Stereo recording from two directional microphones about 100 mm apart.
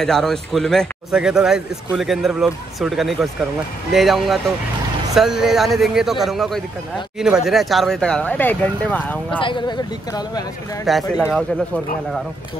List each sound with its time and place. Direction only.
0.0 s speech: 5° left (ahead or behind)
9.4 s speech: 55° left (ahead or behind)
10.9 s speech: centre (ahead or behind)